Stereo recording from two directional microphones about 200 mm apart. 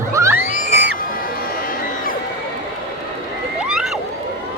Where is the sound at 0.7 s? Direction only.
60° right (ahead or behind).